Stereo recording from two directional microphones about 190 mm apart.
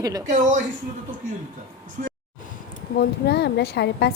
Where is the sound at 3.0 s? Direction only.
60° left (ahead or behind).